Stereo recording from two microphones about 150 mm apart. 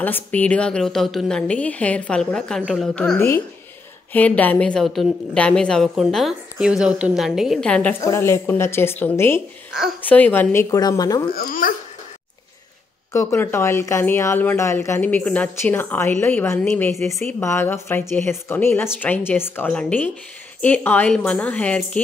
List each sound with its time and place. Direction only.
0.0 s a woman's voice: 10° left (ahead or behind)
8.0 s speech: 20° left (ahead or behind)
11.3 s speech: 70° left (ahead or behind)
13.1 s speech: 20° left (ahead or behind)